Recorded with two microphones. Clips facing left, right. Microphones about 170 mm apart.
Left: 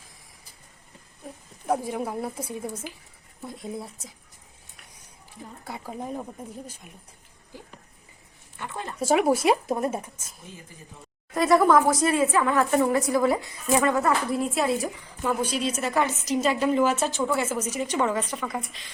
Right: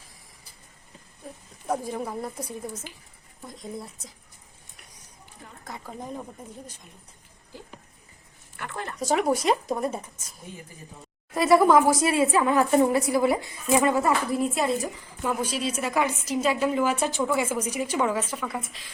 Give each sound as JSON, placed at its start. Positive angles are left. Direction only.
{"t": 1.6, "sound": "speech", "side_deg": 5}
{"t": 3.4, "sound": "a woman's voice", "side_deg": 5}
{"t": 5.6, "sound": "speech", "side_deg": 10}
{"t": 8.5, "sound": "speech", "side_deg": 20}
{"t": 11.3, "sound": "speech", "side_deg": -5}
{"t": 11.7, "sound": "a woman's voice", "side_deg": -25}
{"t": 12.1, "sound": "a woman's voice", "side_deg": -10}
{"t": 12.7, "sound": "a woman's voice", "side_deg": -25}
{"t": 14.3, "sound": "a woman's voice", "side_deg": 0}